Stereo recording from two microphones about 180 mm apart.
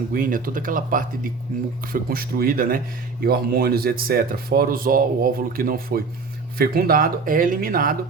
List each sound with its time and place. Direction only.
0.1 s speech: 50° right (ahead or behind)